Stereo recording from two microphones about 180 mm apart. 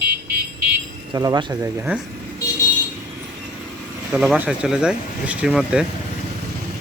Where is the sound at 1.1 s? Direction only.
20° right (ahead or behind).